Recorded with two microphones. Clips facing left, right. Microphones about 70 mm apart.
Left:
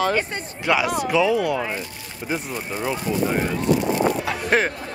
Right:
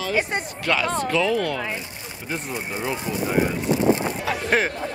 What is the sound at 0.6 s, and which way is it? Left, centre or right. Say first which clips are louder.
Speech: left 3 dB; centre.